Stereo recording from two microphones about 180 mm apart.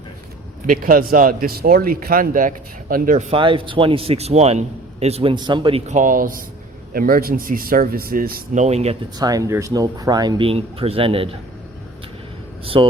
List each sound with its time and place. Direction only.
0.7 s speech: 50° right (ahead or behind)
3.3 s a man's voice: 30° right (ahead or behind)
5.9 s speech: 45° right (ahead or behind)
8.6 s a man's voice: 35° right (ahead or behind)
9.1 s speech: 20° right (ahead or behind)
12.6 s a man's voice: 30° right (ahead or behind)